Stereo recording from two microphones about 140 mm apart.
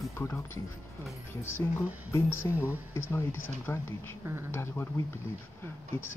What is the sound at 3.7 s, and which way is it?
Speech, 15° left (ahead or behind).